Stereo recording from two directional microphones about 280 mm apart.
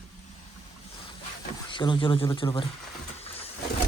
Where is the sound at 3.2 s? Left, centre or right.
Left.